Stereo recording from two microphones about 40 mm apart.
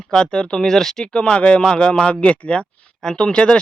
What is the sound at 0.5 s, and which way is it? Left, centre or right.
Speech, centre.